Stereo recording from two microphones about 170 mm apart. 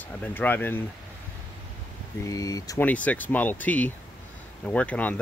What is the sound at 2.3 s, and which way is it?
Speech, 20° left (ahead or behind).